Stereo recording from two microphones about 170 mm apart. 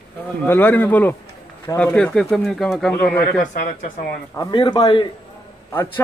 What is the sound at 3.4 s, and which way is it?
Speech, 50° left (ahead or behind).